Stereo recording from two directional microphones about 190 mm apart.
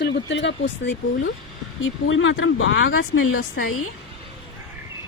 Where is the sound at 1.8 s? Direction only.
85° left.